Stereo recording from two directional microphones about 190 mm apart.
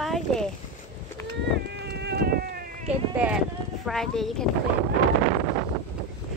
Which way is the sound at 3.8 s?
Centre (ahead or behind).